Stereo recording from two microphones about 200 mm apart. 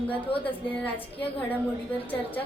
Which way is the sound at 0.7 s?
10° left (ahead or behind).